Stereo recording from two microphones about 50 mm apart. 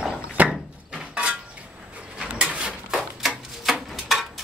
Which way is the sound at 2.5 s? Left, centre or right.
Centre.